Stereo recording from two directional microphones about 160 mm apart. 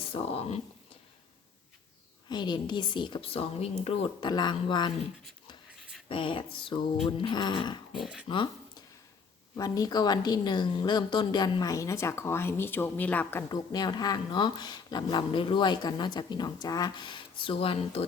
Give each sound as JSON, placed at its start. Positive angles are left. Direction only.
{"t": 0.0, "sound": "speech", "side_deg": 35}
{"t": 2.3, "sound": "speech", "side_deg": 30}
{"t": 6.1, "sound": "speech", "side_deg": 35}
{"t": 7.9, "sound": "speech", "side_deg": -5}
{"t": 8.3, "sound": "speech", "side_deg": 30}
{"t": 13.5, "sound": "speech", "side_deg": 25}